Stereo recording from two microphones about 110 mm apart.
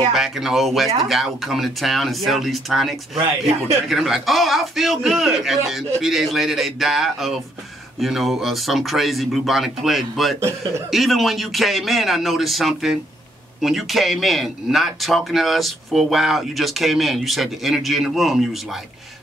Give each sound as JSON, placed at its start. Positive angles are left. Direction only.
{"t": 0.1, "sound": "speech", "side_deg": -5}
{"t": 3.4, "sound": "speech", "side_deg": -70}
{"t": 3.9, "sound": "speech", "side_deg": 0}